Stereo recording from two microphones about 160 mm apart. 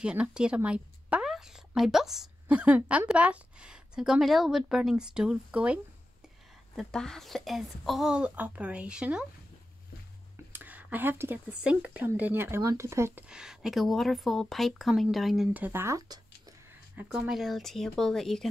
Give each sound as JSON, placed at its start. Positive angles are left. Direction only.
{"t": 0.0, "sound": "speech", "side_deg": -5}
{"t": 6.7, "sound": "speech", "side_deg": 5}
{"t": 10.5, "sound": "speech", "side_deg": -10}
{"t": 13.3, "sound": "speech", "side_deg": -5}
{"t": 16.9, "sound": "speech", "side_deg": -5}